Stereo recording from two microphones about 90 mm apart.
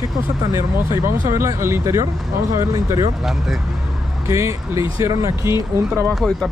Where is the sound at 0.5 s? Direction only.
30° right (ahead or behind).